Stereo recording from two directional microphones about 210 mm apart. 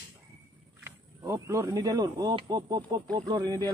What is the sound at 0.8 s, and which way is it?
A man's voice, 15° right (ahead or behind).